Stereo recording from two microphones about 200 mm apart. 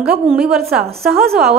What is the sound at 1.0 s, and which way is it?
Speech, 50° right (ahead or behind).